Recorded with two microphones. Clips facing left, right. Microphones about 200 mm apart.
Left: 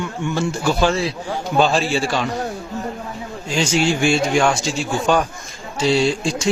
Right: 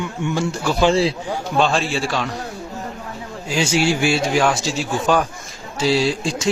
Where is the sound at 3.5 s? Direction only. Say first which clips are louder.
Even; 5° right (ahead or behind).